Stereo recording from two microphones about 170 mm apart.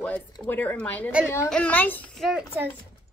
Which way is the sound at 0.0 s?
10° left (ahead or behind).